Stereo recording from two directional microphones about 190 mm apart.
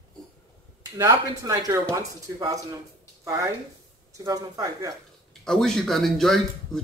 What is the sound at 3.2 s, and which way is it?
A man's voice, 15° right (ahead or behind).